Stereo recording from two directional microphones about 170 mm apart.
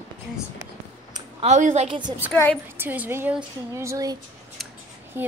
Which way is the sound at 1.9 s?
25° right (ahead or behind).